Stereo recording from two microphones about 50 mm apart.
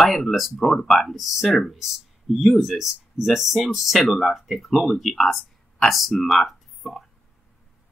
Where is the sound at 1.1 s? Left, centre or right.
Centre.